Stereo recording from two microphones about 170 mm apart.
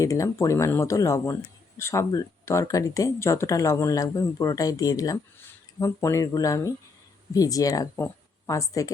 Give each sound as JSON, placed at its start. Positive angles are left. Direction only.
{"t": 0.0, "sound": "speech", "side_deg": 20}